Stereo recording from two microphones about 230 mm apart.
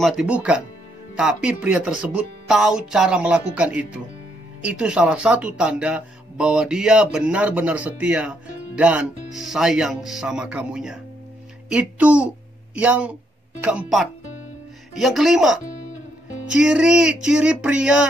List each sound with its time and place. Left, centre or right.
0.0 s speech: centre
15.6 s music: left
16.4 s speech: centre